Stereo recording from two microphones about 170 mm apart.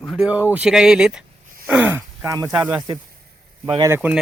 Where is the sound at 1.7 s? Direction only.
10° right (ahead or behind).